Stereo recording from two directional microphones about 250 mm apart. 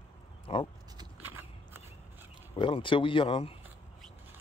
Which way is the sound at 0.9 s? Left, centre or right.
Centre.